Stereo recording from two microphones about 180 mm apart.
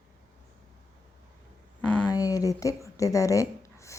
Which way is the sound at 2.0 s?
20° left (ahead or behind).